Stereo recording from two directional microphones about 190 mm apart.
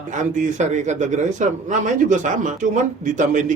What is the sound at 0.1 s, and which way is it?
Speech, 40° right (ahead or behind).